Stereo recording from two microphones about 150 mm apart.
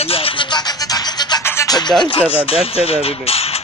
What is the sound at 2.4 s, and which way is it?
Speech, 40° left (ahead or behind).